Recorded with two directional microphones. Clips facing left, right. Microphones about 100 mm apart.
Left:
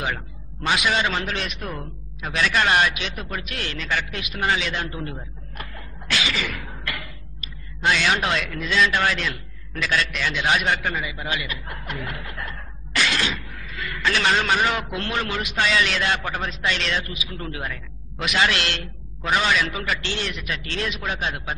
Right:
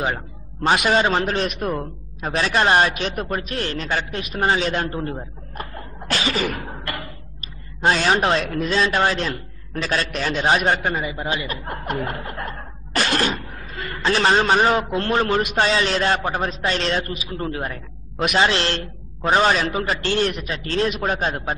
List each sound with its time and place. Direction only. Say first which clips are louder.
0.7 s a man's voice: right 4 dB; 40° right (ahead or behind)